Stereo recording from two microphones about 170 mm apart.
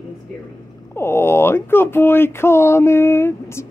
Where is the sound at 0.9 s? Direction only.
15° left (ahead or behind).